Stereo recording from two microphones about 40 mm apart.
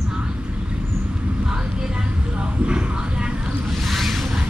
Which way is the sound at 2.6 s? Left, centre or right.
Right.